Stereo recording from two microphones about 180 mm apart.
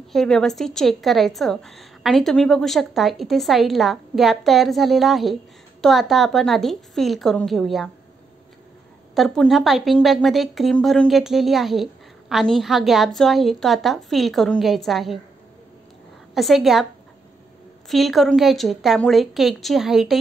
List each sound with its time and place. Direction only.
0.1 s speech: centre (ahead or behind)
9.1 s speech: centre (ahead or behind)
16.3 s speech: centre (ahead or behind)
17.8 s speech: centre (ahead or behind)